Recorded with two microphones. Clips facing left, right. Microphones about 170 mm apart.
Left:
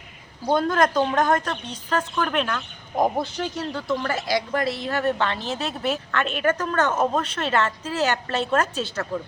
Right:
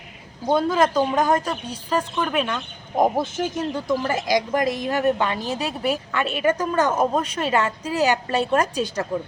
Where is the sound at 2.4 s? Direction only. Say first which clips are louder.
Right 1 dB; 20° right (ahead or behind).